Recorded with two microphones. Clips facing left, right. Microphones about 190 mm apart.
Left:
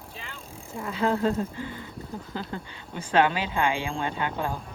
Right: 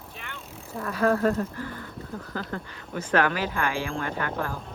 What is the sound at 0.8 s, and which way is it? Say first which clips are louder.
Speech: right 2 dB; 20° left (ahead or behind).